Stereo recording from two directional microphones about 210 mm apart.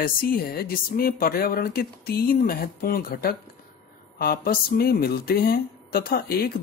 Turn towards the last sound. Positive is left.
turn(degrees=45)  # may be behind; listen again after turning